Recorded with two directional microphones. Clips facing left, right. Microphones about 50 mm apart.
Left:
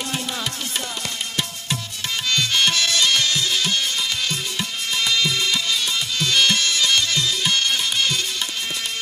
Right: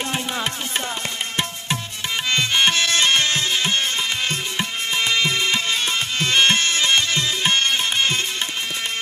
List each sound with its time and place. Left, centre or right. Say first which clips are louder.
2.2 s music: right 1 dB; right